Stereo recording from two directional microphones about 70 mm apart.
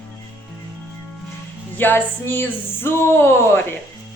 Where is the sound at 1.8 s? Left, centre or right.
Left.